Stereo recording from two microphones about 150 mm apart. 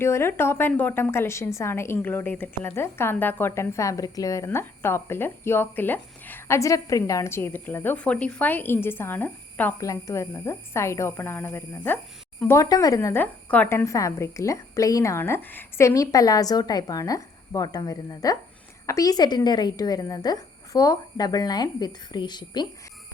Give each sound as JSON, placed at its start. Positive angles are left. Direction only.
{"t": 0.0, "sound": "a woman's voice", "side_deg": 15}